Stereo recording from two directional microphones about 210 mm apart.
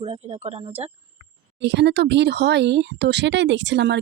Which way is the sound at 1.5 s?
55° right (ahead or behind).